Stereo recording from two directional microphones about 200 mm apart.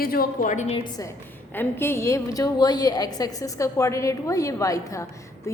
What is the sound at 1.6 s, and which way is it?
A woman's voice, 10° left (ahead or behind).